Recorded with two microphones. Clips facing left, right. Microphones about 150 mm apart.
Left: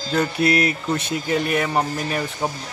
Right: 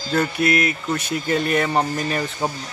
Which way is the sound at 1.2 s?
10° left (ahead or behind).